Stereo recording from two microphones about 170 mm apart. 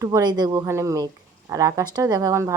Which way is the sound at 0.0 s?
20° right (ahead or behind).